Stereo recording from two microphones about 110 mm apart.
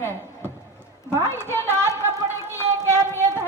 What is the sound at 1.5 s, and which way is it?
Speech, 25° left (ahead or behind).